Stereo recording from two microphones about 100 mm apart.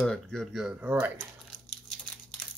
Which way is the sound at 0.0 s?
5° left (ahead or behind).